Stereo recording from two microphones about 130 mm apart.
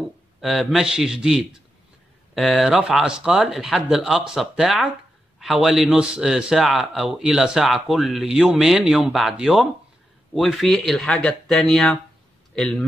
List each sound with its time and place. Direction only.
0.4 s speech: centre (ahead or behind)